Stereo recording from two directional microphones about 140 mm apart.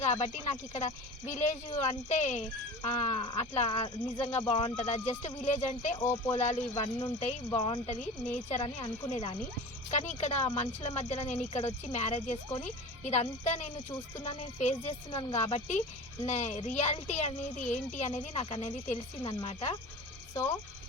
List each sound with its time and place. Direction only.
0.0 s speech: 50° left (ahead or behind)
6.0 s speech: 20° left (ahead or behind)
6.3 s speech: 50° left (ahead or behind)
15.1 s speech: 35° left (ahead or behind)
15.4 s speech: 50° left (ahead or behind)
20.3 s speech: 20° left (ahead or behind)